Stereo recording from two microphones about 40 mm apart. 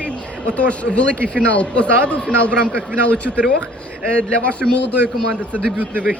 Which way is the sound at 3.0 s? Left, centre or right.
Left.